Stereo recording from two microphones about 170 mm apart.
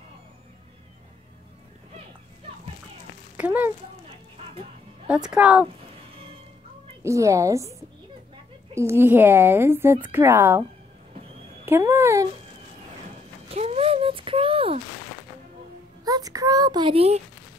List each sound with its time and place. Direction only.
3.3 s speech: 10° right (ahead or behind)
5.0 s speech: 5° right (ahead or behind)
7.0 s speech: 15° right (ahead or behind)
8.7 s speech: 15° right (ahead or behind)
11.6 s speech: 15° right (ahead or behind)
13.5 s a sound: 35° right (ahead or behind)
16.0 s a child's voice: 20° right (ahead or behind)